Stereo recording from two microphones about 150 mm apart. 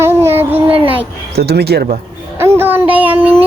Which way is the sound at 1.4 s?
90° right.